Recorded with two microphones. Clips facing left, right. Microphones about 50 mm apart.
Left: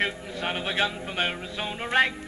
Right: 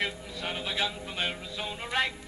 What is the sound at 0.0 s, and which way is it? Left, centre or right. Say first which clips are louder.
A man's voice: left 5 dB; left.